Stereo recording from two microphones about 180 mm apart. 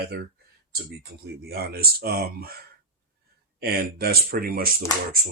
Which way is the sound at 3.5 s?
55° right (ahead or behind).